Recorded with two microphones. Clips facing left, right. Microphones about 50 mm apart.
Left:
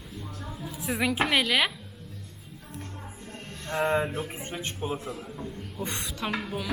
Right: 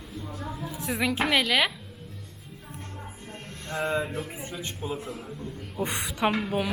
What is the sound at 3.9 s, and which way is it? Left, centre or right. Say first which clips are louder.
Speech: left 2 dB; left.